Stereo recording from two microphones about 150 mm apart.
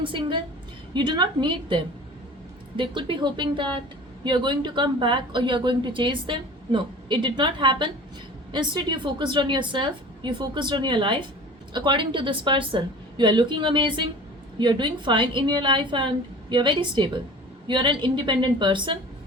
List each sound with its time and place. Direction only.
0.0 s speech: 35° right (ahead or behind)